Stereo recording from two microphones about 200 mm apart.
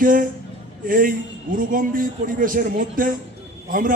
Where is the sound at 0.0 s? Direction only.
45° right (ahead or behind).